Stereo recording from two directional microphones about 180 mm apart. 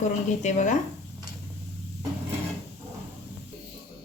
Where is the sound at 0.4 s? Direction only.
45° left (ahead or behind).